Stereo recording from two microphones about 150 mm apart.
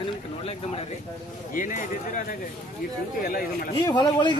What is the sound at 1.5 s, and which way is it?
Speech, 60° left (ahead or behind).